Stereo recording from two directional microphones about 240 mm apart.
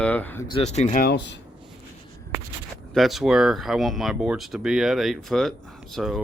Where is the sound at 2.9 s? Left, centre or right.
Centre.